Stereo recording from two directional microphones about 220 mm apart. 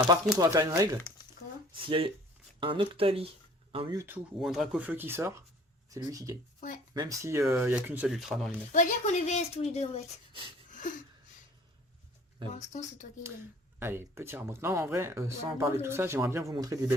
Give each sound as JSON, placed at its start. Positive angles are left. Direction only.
{"t": 0.3, "sound": "speech", "side_deg": -15}
{"t": 4.0, "sound": "speech", "side_deg": -5}
{"t": 8.7, "sound": "a woman's voice", "side_deg": 35}
{"t": 10.7, "sound": "a sound", "side_deg": 35}
{"t": 12.5, "sound": "a woman's voice", "side_deg": 35}
{"t": 13.7, "sound": "speech", "side_deg": -10}